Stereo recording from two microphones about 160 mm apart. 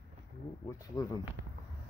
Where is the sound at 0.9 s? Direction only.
25° left (ahead or behind).